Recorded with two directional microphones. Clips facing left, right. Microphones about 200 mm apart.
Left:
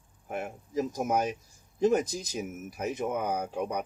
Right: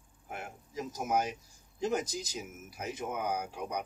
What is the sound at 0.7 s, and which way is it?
Speech, 50° left (ahead or behind).